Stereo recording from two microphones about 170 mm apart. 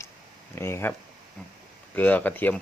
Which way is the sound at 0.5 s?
15° left (ahead or behind).